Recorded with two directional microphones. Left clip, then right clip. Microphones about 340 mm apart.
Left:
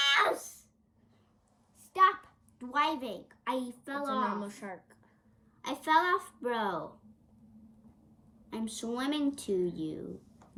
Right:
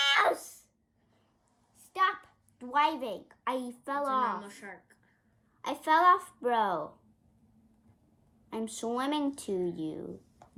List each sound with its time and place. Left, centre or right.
0.0 s a sound: centre
1.8 s a child's voice: centre
4.3 s a woman's voice: centre
5.6 s a woman's voice: centre
8.4 s a woman's voice: centre